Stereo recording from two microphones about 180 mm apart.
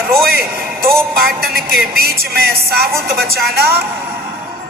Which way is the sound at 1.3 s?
60° right (ahead or behind).